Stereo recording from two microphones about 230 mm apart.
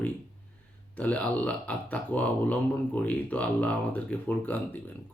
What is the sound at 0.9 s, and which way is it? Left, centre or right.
Speech, centre.